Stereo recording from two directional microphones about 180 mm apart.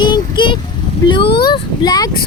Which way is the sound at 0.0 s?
25° left (ahead or behind).